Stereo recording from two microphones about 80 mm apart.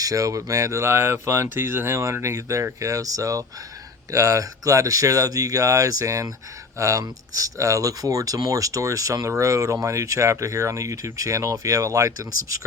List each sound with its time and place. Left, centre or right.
0.0 s speech: right